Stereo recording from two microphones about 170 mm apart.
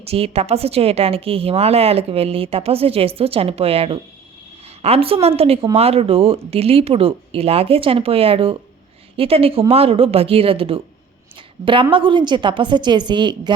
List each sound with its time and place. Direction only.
0.0 s a woman's voice: 35° right (ahead or behind)